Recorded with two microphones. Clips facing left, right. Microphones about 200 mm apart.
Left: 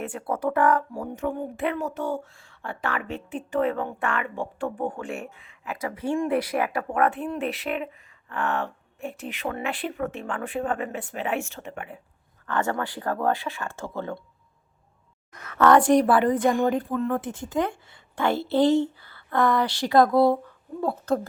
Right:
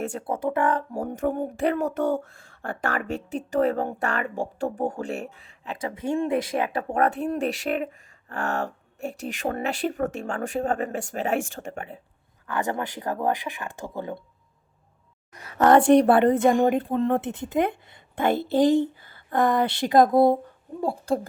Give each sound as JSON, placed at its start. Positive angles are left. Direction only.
{"t": 0.0, "sound": "speech", "side_deg": -40}
{"t": 0.3, "sound": "speech", "side_deg": -25}
{"t": 0.9, "sound": "speech", "side_deg": -50}
{"t": 5.7, "sound": "speech", "side_deg": -25}
{"t": 6.9, "sound": "speech", "side_deg": -40}
{"t": 12.5, "sound": "speech", "side_deg": -15}
{"t": 15.5, "sound": "speech", "side_deg": -25}
{"t": 15.8, "sound": "speech", "side_deg": -60}
{"t": 16.4, "sound": "speech", "side_deg": -25}